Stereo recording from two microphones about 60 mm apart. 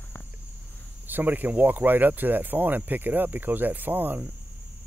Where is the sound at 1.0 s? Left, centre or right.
Right.